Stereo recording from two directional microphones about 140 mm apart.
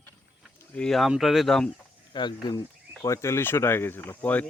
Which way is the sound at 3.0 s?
20° left (ahead or behind).